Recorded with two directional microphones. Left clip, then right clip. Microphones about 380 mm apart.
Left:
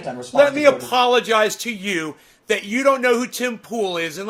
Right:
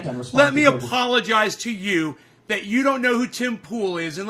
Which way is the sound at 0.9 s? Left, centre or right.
Centre.